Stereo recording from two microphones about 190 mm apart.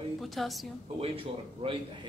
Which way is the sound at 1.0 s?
30° right (ahead or behind).